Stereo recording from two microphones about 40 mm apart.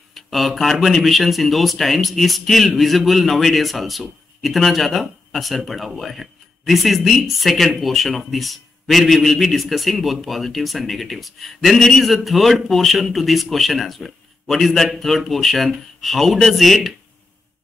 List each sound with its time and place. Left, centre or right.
0.1 s speech: centre